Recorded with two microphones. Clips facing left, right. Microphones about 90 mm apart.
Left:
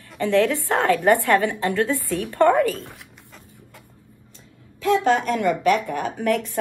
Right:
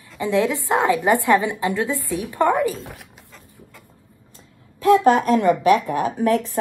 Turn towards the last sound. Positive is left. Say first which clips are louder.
# right 3 dB
turn(degrees=-20)  # may be behind; listen again after turning